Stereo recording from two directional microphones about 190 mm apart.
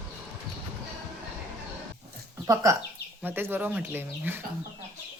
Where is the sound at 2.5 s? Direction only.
15° right (ahead or behind).